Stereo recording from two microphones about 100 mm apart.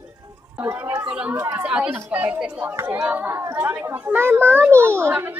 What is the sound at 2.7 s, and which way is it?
Speech, 25° right (ahead or behind).